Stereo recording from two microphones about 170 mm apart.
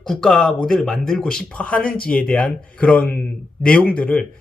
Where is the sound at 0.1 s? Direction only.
Centre (ahead or behind).